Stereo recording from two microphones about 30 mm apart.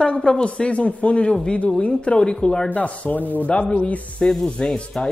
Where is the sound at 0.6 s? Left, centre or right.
Left.